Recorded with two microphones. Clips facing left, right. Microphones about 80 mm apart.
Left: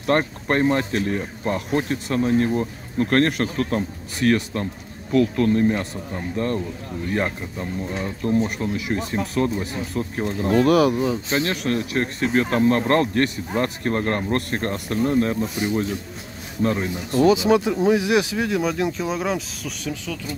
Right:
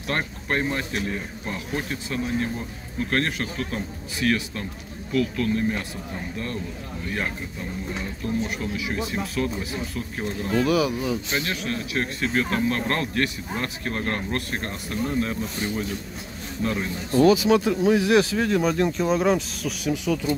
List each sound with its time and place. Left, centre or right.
0.1 s speech: left
8.2 s speech: left
8.7 s speech: left
11.0 s speech: left
11.5 s speech: left
12.0 s speech: left
15.5 s speech: left
18.6 s speech: centre
19.8 s speech: centre